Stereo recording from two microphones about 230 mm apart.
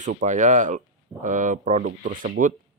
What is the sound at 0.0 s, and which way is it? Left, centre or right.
Speech, right.